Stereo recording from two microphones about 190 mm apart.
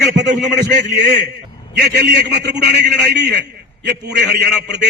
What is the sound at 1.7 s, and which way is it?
A man's voice, 60° right (ahead or behind).